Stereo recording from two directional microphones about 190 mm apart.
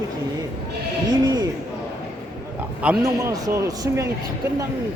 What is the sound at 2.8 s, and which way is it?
Speech, 5° right (ahead or behind).